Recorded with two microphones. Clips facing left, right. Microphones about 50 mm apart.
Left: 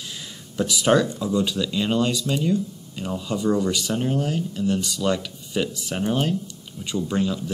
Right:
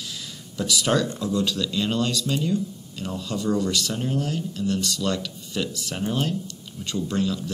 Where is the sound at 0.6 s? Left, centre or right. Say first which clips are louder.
Left 4 dB; left.